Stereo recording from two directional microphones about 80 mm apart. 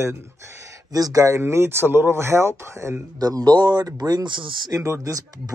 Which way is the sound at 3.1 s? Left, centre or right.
Right.